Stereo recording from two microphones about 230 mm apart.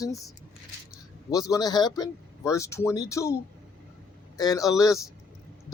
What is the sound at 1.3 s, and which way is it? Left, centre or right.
Speech, centre.